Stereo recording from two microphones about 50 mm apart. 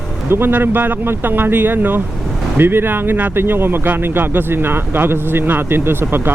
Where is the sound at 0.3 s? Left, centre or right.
Right.